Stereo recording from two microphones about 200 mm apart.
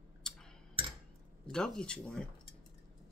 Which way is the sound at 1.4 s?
5° left (ahead or behind).